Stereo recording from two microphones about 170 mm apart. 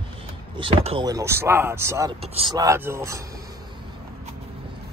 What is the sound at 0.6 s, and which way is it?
Speech, 30° right (ahead or behind).